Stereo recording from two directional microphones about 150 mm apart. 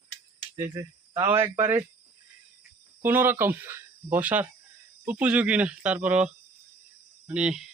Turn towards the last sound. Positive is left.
turn(degrees=-5)  # may be behind; listen again after turning